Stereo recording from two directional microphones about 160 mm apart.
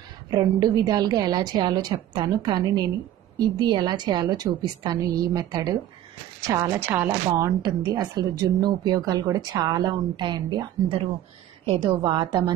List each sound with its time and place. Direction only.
0.3 s a woman's voice: 25° right (ahead or behind)